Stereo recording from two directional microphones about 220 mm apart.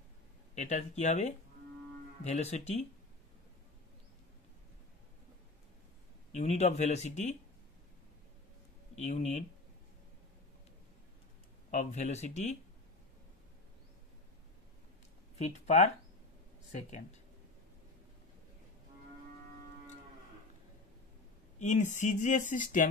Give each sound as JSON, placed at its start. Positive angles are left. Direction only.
{"t": 0.6, "sound": "speech", "side_deg": 30}
{"t": 6.3, "sound": "speech", "side_deg": 30}
{"t": 8.9, "sound": "speech", "side_deg": 30}
{"t": 11.7, "sound": "speech", "side_deg": 30}
{"t": 15.3, "sound": "speech", "side_deg": 30}
{"t": 21.5, "sound": "speech", "side_deg": 35}